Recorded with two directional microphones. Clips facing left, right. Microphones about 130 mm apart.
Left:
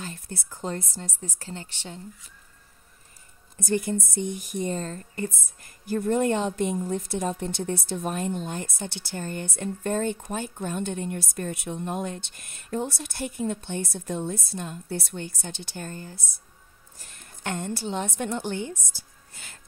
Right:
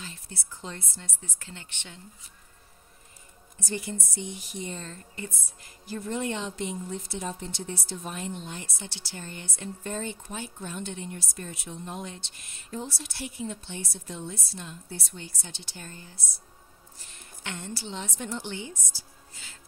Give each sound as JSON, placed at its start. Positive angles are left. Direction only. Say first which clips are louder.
{"t": 0.0, "sound": "speech", "louder": "left 6 dB", "side_deg": 50}
{"t": 3.5, "sound": "a woman's voice", "louder": "left 8 dB", "side_deg": 50}